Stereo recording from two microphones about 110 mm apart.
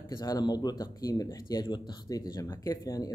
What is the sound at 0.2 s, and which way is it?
Speech, 35° left (ahead or behind).